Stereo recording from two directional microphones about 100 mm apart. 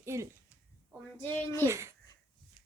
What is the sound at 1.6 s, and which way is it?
Speech, 30° right (ahead or behind).